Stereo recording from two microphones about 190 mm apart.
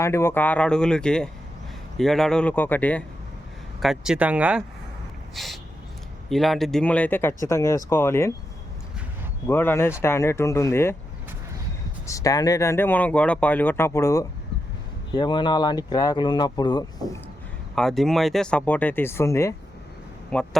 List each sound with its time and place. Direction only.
0.0 s speech: 15° left (ahead or behind)
3.8 s speech: centre (ahead or behind)
5.3 s a sound: centre (ahead or behind)
6.2 s speech: centre (ahead or behind)
9.5 s speech: 10° left (ahead or behind)
12.0 s speech: 15° left (ahead or behind)
17.7 s speech: centre (ahead or behind)
20.3 s speech: 5° left (ahead or behind)